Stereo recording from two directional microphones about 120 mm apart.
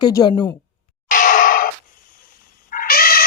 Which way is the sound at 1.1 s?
90° left.